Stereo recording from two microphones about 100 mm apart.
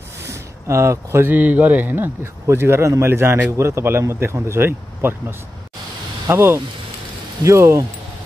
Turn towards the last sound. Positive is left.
turn(degrees=-30)  # may be behind; listen again after turning